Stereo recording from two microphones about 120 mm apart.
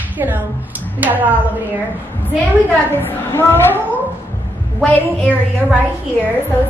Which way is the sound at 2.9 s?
20° left (ahead or behind).